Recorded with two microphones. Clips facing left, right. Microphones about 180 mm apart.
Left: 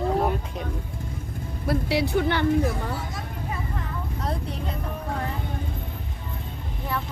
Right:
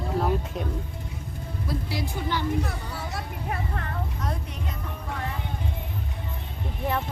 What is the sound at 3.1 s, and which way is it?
Vehicle, 65° right (ahead or behind).